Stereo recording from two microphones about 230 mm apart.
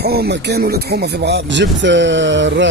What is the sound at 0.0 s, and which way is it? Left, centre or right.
Speech, right.